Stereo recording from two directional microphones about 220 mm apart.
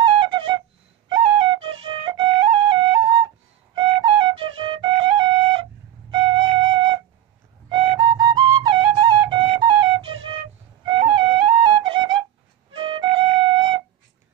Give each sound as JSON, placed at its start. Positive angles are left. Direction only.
{"t": 0.0, "sound": "flute", "side_deg": -20}